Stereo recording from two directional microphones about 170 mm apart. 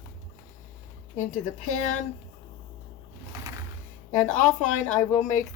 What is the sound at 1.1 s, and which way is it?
Speech, 45° left (ahead or behind).